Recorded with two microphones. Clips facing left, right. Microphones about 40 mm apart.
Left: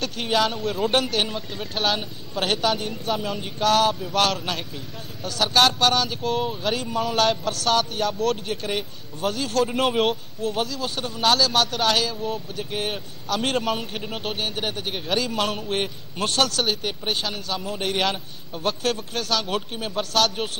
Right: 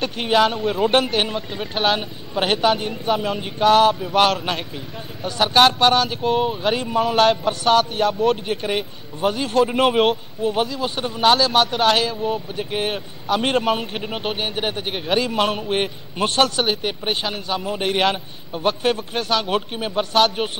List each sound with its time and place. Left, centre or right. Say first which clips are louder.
0.0 s a man's voice: right 5 dB; right